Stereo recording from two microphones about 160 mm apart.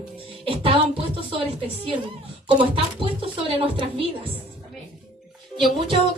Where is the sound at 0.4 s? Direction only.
35° right (ahead or behind).